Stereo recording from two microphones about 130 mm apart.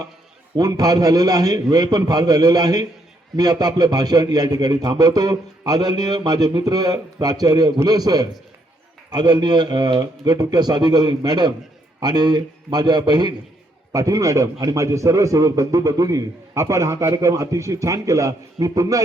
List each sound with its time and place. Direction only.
0.5 s a man's voice: 30° right (ahead or behind)